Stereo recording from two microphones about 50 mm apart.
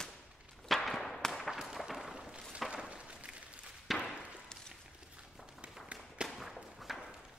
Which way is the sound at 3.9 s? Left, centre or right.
Centre.